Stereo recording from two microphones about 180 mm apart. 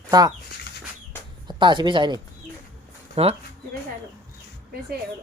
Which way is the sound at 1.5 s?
25° right (ahead or behind).